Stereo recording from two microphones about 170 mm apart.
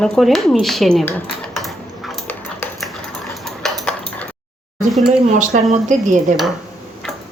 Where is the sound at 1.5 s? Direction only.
Centre (ahead or behind).